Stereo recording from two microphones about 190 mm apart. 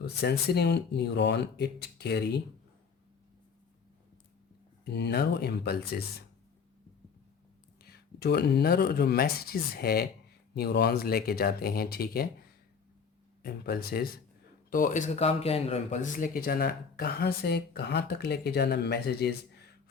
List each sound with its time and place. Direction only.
0.0 s speech: 55° left (ahead or behind)
4.9 s speech: 60° left (ahead or behind)
7.8 s speech: 55° left (ahead or behind)